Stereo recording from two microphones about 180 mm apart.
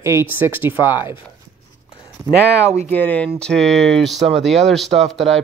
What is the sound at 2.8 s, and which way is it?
Speech, 10° left (ahead or behind).